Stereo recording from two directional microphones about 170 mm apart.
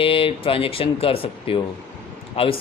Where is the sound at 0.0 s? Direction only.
35° left (ahead or behind).